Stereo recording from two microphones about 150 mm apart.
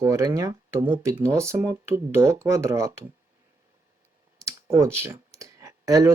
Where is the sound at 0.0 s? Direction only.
20° right (ahead or behind).